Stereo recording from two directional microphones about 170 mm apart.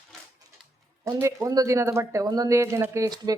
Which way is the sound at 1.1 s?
15° right (ahead or behind).